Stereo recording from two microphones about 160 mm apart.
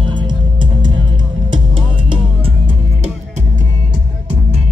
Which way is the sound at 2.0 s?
35° right (ahead or behind).